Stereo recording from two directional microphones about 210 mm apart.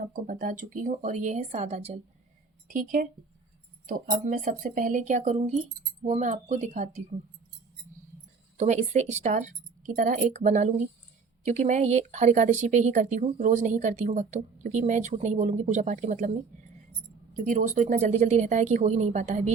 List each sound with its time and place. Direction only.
0.1 s speech: 40° right (ahead or behind)
2.6 s speech: 40° right (ahead or behind)
8.5 s speech: 35° right (ahead or behind)